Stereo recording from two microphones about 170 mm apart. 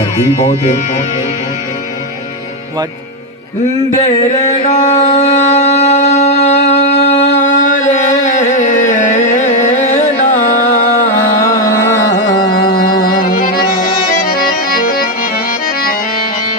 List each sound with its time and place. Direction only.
4.6 s a sound: 45° left (ahead or behind)
7.1 s music: 40° left (ahead or behind)
11.3 s carnatic music: 60° left (ahead or behind)
12.6 s music: 60° left (ahead or behind)
14.3 s accordion: 60° left (ahead or behind)